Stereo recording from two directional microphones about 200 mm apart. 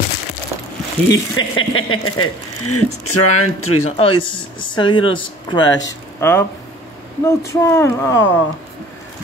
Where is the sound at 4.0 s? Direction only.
25° left (ahead or behind).